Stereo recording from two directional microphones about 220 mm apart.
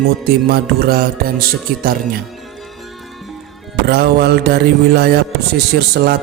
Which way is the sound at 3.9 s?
45° right (ahead or behind).